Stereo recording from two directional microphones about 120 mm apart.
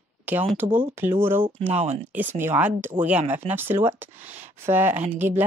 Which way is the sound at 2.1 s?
20° right (ahead or behind).